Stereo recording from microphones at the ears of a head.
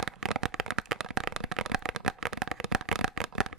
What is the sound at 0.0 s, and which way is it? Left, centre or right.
Shuffling cards, right.